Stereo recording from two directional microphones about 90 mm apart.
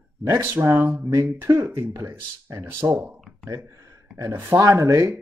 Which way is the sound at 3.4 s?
35° right (ahead or behind).